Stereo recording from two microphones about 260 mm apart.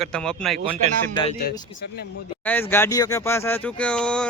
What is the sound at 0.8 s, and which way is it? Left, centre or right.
Speech, right.